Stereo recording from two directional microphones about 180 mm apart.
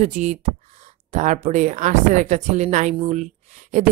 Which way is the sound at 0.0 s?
40° right (ahead or behind).